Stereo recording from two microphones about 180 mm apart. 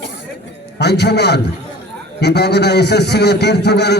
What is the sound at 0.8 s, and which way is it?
A man's voice, 70° left (ahead or behind).